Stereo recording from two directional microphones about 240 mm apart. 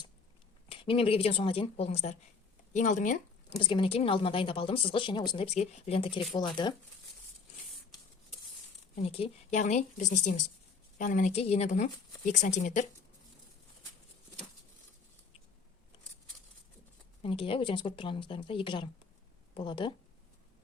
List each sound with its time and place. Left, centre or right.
0.7 s speech: left
3.5 s speech: left
9.0 s speech: left
17.2 s speech: left